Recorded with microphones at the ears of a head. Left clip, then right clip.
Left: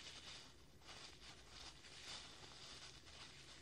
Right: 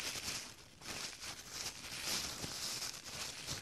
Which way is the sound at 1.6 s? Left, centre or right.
Right.